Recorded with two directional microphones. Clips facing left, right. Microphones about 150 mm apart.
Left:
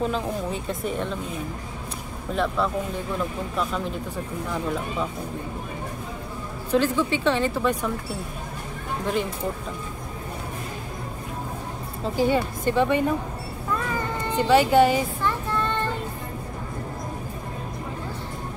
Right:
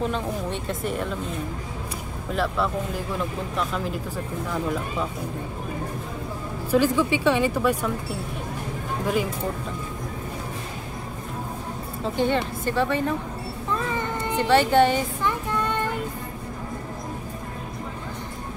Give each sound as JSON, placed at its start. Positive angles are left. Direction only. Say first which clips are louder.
{"t": 0.0, "sound": "speech", "louder": "left 1 dB", "side_deg": 0}
{"t": 6.7, "sound": "speech", "louder": "right 1 dB", "side_deg": -10}
{"t": 9.0, "sound": "speech", "louder": "right 1 dB", "side_deg": -5}
{"t": 12.0, "sound": "a woman's voice", "louder": "left 1 dB", "side_deg": 5}
{"t": 14.5, "sound": "speech", "louder": "left 1 dB", "side_deg": 5}
{"t": 15.2, "sound": "child singing", "louder": "even", "side_deg": -15}